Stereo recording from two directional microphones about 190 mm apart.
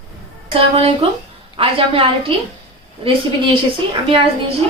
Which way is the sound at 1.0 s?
30° right (ahead or behind).